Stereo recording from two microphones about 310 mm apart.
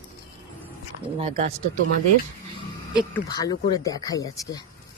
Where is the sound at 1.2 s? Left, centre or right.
Centre.